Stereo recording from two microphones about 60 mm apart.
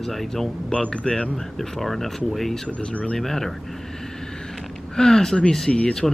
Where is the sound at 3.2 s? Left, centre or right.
Centre.